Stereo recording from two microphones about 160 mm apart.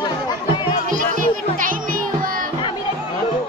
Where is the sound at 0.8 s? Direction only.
55° right (ahead or behind).